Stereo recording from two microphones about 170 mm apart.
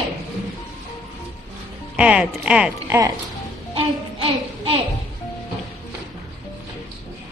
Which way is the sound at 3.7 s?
35° right (ahead or behind).